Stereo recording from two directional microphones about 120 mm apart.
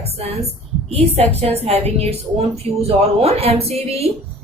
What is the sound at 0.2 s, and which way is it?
A woman's voice, 60° right (ahead or behind).